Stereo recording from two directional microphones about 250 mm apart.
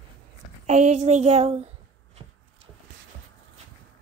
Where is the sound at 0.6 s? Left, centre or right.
Right.